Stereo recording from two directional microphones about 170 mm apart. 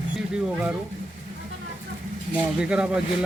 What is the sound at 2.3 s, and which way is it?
Speech, 5° right (ahead or behind).